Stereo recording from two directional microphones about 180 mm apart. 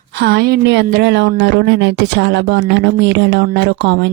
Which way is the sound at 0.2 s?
65° right (ahead or behind).